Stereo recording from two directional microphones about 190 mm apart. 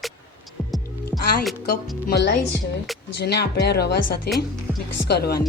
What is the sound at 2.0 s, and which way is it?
Speech, 65° left (ahead or behind).